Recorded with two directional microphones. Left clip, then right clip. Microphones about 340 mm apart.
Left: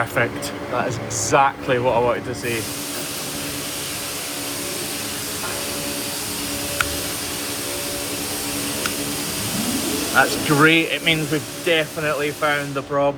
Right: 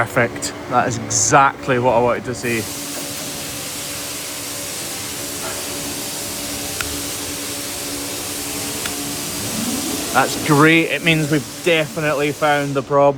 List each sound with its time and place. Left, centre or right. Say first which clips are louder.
0.0 s a sound: right 3 dB; right
0.9 s speech: right 4 dB; right
10.2 s speech: right 2 dB; right